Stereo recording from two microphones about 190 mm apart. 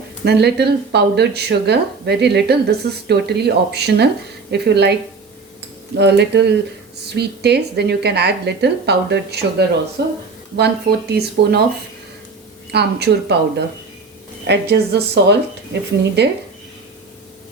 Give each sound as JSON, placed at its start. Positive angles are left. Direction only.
{"t": 0.3, "sound": "speech", "side_deg": -60}
{"t": 6.0, "sound": "speech", "side_deg": -60}
{"t": 12.7, "sound": "speech", "side_deg": -60}